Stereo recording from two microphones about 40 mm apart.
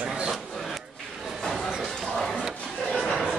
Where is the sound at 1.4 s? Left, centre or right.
Centre.